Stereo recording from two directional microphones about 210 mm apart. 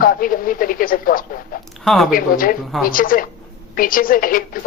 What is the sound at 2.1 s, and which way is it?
Speech, 40° left (ahead or behind).